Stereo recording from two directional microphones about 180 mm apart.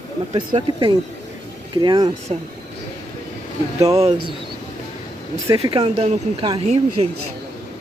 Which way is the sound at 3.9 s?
35° right (ahead or behind).